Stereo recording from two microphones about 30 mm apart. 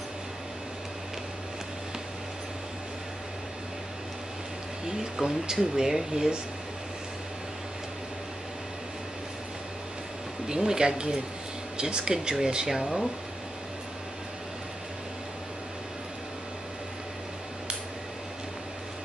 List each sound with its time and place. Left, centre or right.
4.8 s speech: centre
10.5 s speech: right
12.8 s speech: centre